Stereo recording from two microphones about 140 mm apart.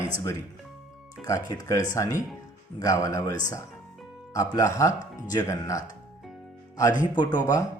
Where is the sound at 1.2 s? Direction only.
25° left (ahead or behind).